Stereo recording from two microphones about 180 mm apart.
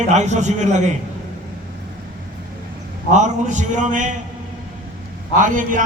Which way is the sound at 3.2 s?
40° right (ahead or behind).